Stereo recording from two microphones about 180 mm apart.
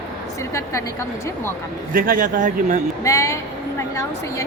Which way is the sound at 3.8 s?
15° left (ahead or behind).